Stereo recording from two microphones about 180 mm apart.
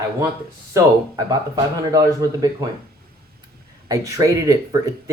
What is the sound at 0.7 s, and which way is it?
Speech, 20° right (ahead or behind).